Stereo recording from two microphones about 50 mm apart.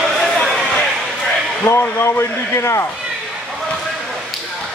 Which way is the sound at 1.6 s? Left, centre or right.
Left.